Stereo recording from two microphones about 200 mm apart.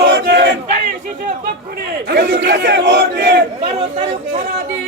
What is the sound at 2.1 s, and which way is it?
Speech, 60° right (ahead or behind).